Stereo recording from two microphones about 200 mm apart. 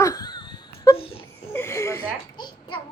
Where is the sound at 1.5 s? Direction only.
15° left (ahead or behind).